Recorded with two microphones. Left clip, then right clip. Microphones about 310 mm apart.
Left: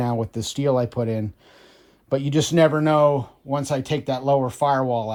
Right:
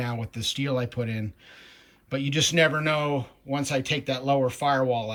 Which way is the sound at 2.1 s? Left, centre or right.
Centre.